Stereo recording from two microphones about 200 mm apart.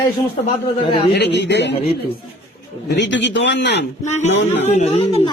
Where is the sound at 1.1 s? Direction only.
55° left (ahead or behind).